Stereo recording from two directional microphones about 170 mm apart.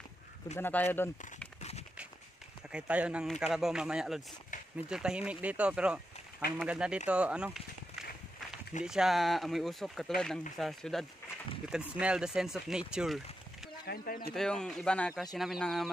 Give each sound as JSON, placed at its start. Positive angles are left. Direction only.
{"t": 0.6, "sound": "speech", "side_deg": 10}
{"t": 1.6, "sound": "a sound", "side_deg": 40}
{"t": 2.7, "sound": "speech", "side_deg": -10}
{"t": 8.8, "sound": "speech", "side_deg": -5}
{"t": 13.8, "sound": "speech", "side_deg": 55}
{"t": 14.3, "sound": "speech", "side_deg": 5}